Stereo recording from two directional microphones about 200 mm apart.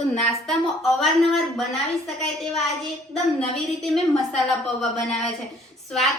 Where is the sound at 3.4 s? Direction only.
Centre (ahead or behind).